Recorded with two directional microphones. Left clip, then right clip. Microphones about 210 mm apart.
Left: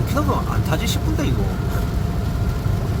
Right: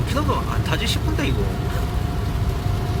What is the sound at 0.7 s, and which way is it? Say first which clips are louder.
Speech: even; 15° left (ahead or behind).